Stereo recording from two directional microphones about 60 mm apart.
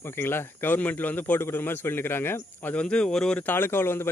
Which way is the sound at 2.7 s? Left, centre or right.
Centre.